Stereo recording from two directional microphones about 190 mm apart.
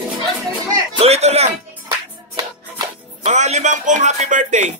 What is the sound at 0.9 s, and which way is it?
Music, 35° right (ahead or behind).